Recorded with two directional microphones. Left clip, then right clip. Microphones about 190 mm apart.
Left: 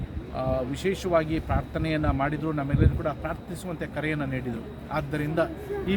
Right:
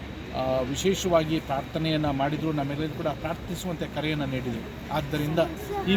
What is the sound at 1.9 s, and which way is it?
A man's voice, 5° right (ahead or behind).